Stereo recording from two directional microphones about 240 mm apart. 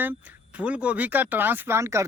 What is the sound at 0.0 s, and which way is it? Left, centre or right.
Speech, centre.